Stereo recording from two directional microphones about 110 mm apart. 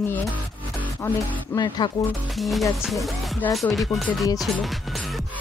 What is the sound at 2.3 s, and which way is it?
Speech, centre (ahead or behind).